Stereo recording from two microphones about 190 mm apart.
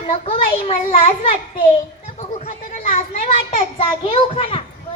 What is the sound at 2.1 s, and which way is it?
Chatter, 35° left (ahead or behind).